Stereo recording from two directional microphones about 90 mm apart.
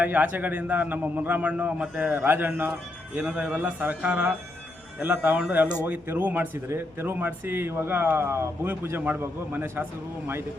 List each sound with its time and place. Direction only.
0.0 s speech: 20° right (ahead or behind)